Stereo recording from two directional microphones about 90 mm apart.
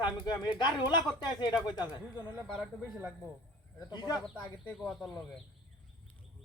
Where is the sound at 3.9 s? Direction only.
50° left (ahead or behind).